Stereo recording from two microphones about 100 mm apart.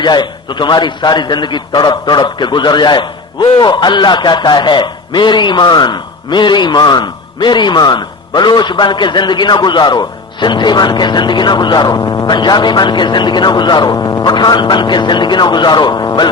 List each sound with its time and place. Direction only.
0.0 s a man's voice: 50° left (ahead or behind)